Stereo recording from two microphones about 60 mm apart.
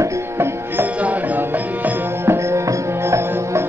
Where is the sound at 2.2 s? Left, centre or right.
Right.